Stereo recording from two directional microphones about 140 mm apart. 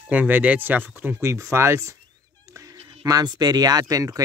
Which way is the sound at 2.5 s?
25° right (ahead or behind).